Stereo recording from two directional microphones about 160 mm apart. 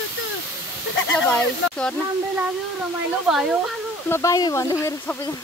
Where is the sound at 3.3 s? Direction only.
5° right (ahead or behind).